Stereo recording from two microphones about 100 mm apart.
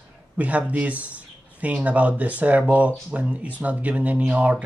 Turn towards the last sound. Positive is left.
turn(degrees=-15)  # may be behind; listen again after turning